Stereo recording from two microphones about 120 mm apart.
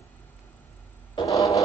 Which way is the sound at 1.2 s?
30° left (ahead or behind).